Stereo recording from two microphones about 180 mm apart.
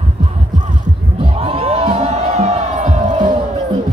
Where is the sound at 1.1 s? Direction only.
30° right (ahead or behind).